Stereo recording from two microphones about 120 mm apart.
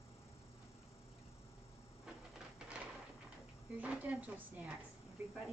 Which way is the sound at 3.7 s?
10° right (ahead or behind).